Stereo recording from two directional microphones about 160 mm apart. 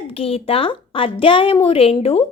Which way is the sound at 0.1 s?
35° left (ahead or behind).